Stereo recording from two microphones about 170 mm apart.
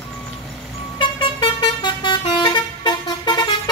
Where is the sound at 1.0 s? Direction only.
30° left (ahead or behind).